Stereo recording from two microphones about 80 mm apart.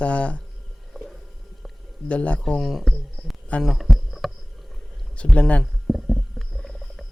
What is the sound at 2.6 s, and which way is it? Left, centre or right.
Speech, centre.